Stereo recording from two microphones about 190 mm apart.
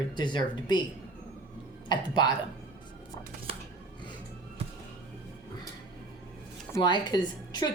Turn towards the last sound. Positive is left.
turn(degrees=25)  # may be behind; listen again after turning